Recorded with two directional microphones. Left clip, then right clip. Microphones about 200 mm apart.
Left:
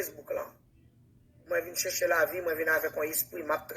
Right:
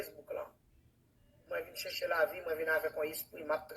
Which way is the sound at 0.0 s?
45° left (ahead or behind).